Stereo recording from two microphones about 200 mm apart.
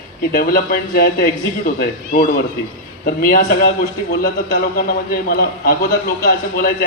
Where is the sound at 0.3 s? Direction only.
50° left (ahead or behind).